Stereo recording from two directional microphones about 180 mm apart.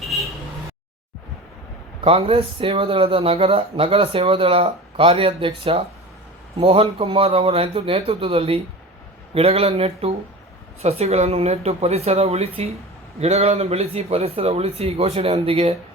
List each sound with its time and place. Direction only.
2.0 s speech: 30° right (ahead or behind)